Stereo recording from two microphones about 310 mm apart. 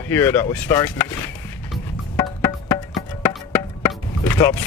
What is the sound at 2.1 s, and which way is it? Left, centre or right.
Music, centre.